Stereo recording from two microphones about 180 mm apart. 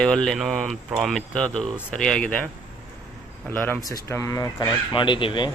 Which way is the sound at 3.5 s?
10° left (ahead or behind).